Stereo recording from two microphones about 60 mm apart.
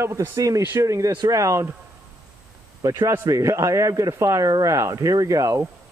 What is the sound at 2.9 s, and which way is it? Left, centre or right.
Speech, right.